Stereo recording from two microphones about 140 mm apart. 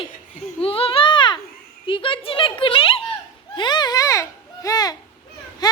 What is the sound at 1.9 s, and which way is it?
A child's voice, 40° left (ahead or behind).